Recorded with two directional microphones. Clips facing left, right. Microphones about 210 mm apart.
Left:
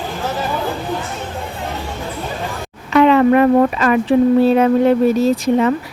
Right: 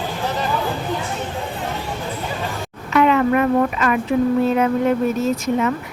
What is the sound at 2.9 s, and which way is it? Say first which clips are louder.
Speech: left 5 dB; 30° left (ahead or behind).